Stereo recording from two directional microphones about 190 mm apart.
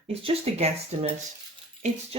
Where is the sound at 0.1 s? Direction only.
30° right (ahead or behind).